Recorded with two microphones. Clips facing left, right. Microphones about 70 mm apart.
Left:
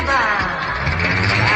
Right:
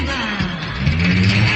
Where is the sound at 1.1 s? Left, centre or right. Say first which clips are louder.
Right 2 dB; left.